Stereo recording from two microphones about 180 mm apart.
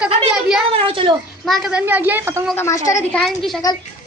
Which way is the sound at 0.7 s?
30° right (ahead or behind).